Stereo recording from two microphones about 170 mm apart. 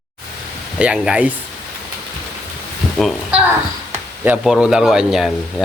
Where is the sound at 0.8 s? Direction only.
5° right (ahead or behind).